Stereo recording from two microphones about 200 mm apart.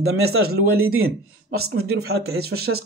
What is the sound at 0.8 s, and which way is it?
Speech, 90° right.